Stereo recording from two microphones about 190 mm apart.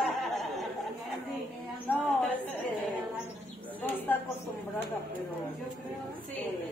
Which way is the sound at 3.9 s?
10° left (ahead or behind).